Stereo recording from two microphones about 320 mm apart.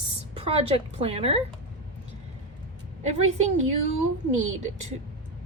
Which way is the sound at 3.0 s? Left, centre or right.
Right.